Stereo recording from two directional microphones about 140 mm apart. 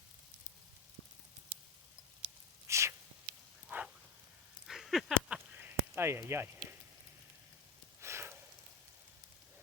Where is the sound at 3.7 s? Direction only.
10° right (ahead or behind).